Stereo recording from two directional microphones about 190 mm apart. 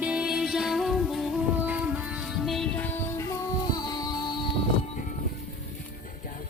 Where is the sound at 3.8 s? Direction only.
20° left (ahead or behind).